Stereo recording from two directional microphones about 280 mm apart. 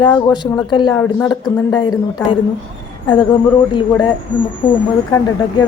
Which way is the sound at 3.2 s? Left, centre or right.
Centre.